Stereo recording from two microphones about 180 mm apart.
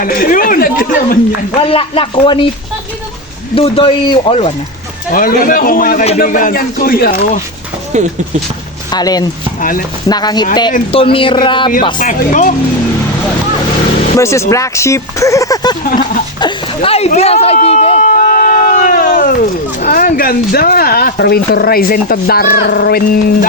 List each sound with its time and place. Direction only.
0.0 s speech: 50° left (ahead or behind)
1.6 s speech: 30° left (ahead or behind)
3.5 s speech: 30° left (ahead or behind)
5.1 s speech: 50° left (ahead or behind)
7.9 s speech: 40° right (ahead or behind)
8.9 s speech: 20° left (ahead or behind)
9.6 s speech: 50° left (ahead or behind)
10.1 s speech: 20° left (ahead or behind)
11.9 s speech: 45° left (ahead or behind)
14.2 s speech: 15° left (ahead or behind)
15.8 s speech: 55° left (ahead or behind)
16.4 s a sound: 35° left (ahead or behind); by 19.3 s 50° left (ahead or behind)
19.8 s speech: 50° left (ahead or behind)